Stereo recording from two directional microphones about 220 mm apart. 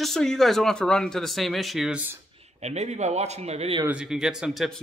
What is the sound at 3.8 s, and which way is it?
Speech, 5° right (ahead or behind).